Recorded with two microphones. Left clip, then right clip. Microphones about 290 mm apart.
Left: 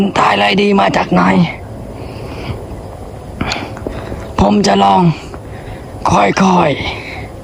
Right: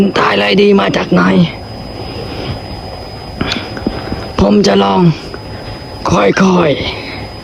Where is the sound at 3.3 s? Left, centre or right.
Centre.